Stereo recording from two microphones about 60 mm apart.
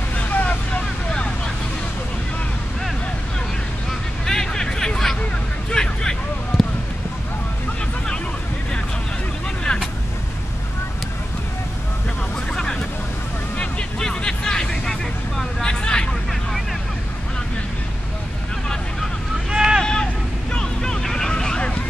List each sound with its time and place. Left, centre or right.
0.1 s vehicle: left
4.3 s hubbub: centre
5.7 s a sound: centre
9.7 s vehicle: centre
13.6 s vehicle: centre
19.5 s boat: centre
19.8 s vehicle: centre